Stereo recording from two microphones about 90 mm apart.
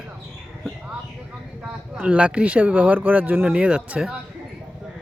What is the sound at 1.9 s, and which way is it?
Speech, 15° right (ahead or behind).